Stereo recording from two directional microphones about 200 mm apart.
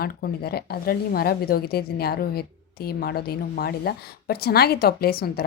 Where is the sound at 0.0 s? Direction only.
50° left (ahead or behind).